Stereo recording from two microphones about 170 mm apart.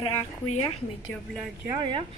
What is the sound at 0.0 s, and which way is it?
Speech, 30° left (ahead or behind).